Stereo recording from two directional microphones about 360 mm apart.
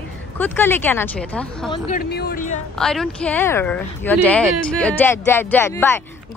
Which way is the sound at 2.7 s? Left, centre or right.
Centre.